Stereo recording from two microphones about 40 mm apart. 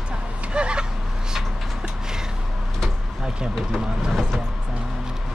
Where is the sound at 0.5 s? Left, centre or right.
Right.